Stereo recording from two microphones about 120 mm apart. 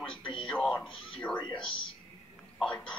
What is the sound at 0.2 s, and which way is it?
Music, 45° left (ahead or behind).